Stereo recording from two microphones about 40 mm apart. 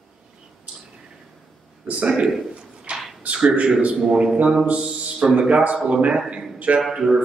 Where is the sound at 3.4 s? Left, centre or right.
Right.